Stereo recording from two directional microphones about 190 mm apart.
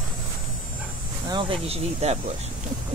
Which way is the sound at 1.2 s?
25° right (ahead or behind).